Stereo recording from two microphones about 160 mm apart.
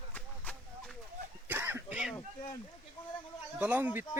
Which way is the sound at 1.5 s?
15° right (ahead or behind).